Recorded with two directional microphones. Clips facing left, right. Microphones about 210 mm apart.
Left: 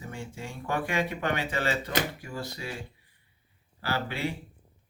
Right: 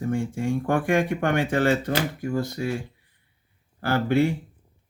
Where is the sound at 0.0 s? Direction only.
50° right (ahead or behind).